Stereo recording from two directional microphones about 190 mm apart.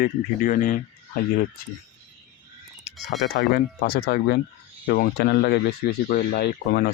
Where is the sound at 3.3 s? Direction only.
60° left (ahead or behind).